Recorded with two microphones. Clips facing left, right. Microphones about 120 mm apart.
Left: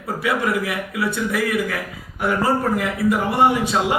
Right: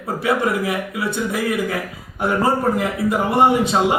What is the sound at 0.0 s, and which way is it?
A man's voice, 25° right (ahead or behind).